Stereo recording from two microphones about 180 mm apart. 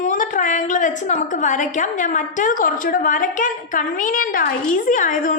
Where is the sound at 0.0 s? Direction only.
45° left (ahead or behind).